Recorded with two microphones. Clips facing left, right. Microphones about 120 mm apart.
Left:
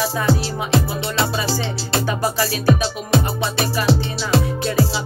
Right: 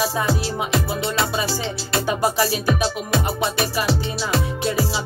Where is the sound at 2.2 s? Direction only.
25° right (ahead or behind).